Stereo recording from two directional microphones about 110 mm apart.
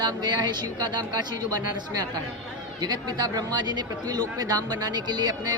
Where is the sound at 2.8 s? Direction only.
35° right (ahead or behind).